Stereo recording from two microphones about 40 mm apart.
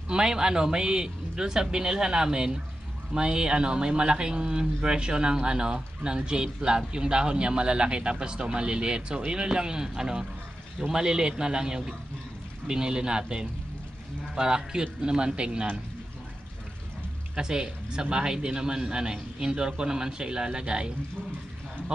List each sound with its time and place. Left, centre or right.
0.1 s a man's voice: right
17.4 s speech: centre